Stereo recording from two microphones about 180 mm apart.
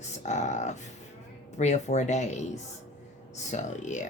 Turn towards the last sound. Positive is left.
turn(degrees=40)  # may be behind; listen again after turning